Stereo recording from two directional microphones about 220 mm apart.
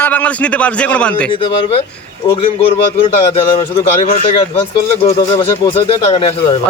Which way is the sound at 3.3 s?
25° left (ahead or behind).